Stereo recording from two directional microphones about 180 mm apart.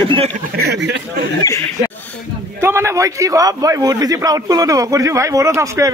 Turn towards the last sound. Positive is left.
turn(degrees=-15)  # may be behind; listen again after turning